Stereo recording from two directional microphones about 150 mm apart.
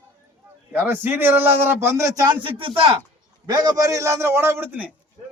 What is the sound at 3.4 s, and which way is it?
A man's voice, 25° right (ahead or behind).